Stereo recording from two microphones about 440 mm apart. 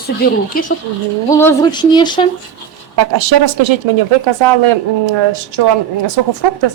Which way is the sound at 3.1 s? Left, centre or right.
Right.